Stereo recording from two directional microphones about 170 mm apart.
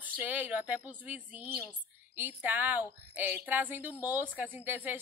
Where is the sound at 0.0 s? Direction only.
10° right (ahead or behind).